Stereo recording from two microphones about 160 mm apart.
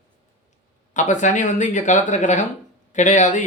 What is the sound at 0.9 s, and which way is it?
Speech, 50° left (ahead or behind).